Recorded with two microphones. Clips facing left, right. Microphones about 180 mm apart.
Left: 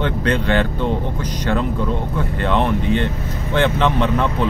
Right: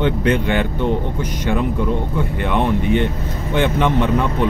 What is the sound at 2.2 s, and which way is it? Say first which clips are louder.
Speech: left 3 dB; 15° right (ahead or behind).